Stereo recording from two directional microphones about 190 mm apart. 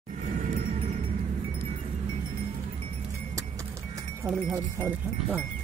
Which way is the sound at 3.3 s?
15° right (ahead or behind).